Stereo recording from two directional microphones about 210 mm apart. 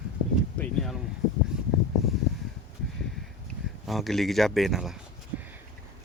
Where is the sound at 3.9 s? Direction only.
Centre (ahead or behind).